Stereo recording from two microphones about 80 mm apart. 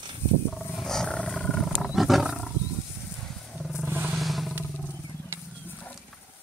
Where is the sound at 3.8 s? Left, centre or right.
Right.